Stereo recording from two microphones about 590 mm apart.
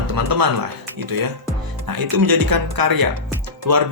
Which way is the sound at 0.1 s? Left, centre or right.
Right.